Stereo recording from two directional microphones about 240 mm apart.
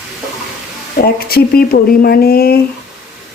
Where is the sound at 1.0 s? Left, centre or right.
Left.